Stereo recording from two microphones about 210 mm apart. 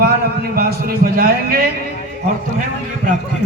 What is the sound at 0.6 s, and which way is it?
A man's voice, 45° right (ahead or behind).